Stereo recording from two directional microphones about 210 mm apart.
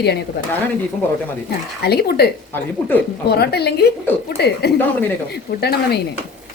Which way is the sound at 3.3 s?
50° left (ahead or behind).